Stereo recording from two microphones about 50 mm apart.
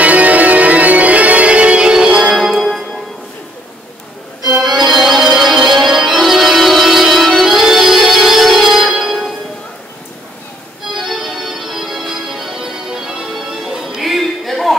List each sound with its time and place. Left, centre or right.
0.0 s music: right; by 2.3 s centre
2.3 s music: centre
4.6 s organ: centre
10.9 s organ: centre